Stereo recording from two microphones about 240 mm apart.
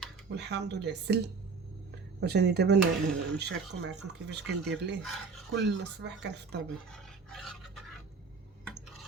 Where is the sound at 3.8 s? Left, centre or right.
Right.